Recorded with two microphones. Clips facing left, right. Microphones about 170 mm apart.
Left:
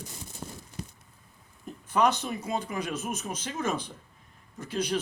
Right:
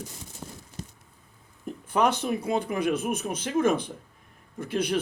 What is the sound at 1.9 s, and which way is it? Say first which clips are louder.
A man's voice: right 1 dB; 55° right (ahead or behind).